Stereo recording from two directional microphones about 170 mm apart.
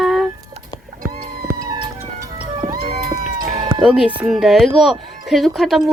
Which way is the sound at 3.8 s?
5° right (ahead or behind).